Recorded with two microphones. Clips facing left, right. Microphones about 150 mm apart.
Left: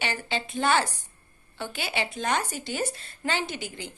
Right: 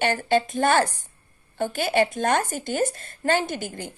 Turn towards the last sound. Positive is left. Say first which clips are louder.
# right 4 dB
turn(degrees=-45)  # may be behind; listen again after turning